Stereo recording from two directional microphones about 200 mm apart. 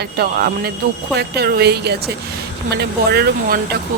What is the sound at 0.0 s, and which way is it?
Speech, 50° right (ahead or behind).